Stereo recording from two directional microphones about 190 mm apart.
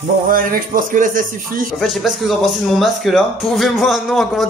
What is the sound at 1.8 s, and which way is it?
Speech, centre (ahead or behind).